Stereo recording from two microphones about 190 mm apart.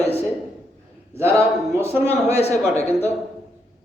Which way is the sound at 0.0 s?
35° left (ahead or behind).